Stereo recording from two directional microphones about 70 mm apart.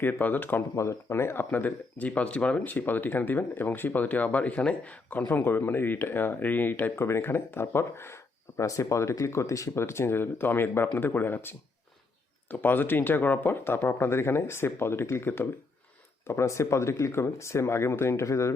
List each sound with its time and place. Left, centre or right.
0.0 s speech: left
0.8 s speech: left
1.5 s speech: left
2.6 s speech: left
5.3 s speech: left
8.5 s speech: left